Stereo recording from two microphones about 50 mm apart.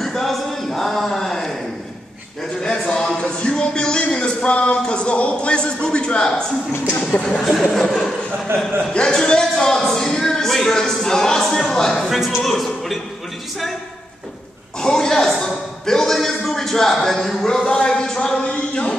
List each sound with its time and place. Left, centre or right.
0.0 s a sound: centre
2.6 s a sound: centre
7.0 s speech: centre
7.2 s speech: centre
7.6 s chuckle: centre
8.9 s speech: centre
14.8 s chuckle: centre
15.4 s a man's voice: centre
17.6 s speech: centre